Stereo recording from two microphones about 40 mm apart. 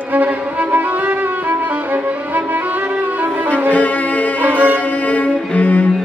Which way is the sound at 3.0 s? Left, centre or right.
Right.